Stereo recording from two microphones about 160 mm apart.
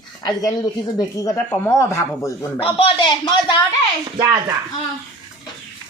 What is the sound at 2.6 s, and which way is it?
Speech, 30° left (ahead or behind).